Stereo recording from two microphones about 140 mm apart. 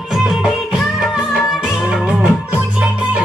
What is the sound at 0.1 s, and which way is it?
Music, 5° right (ahead or behind).